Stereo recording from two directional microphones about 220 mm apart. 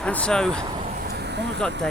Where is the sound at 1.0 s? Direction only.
45° right (ahead or behind).